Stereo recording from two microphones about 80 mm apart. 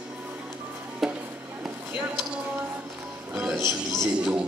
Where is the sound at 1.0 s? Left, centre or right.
Centre.